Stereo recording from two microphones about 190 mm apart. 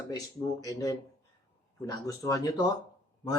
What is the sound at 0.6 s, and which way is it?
Speech, 20° left (ahead or behind).